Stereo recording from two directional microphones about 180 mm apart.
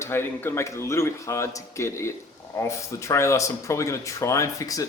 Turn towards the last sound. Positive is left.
turn(degrees=20)  # may be behind; listen again after turning